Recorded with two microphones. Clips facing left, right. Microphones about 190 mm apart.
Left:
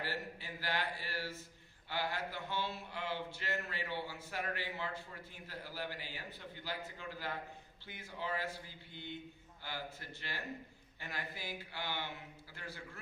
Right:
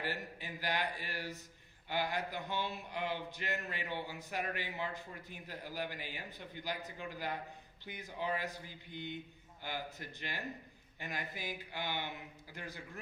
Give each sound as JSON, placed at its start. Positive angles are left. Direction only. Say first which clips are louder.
{"t": 0.0, "sound": "a man's voice", "louder": "right 1 dB", "side_deg": -15}